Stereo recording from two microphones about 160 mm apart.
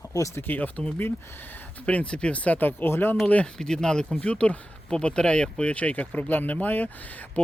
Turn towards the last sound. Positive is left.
turn(degrees=10)  # may be behind; listen again after turning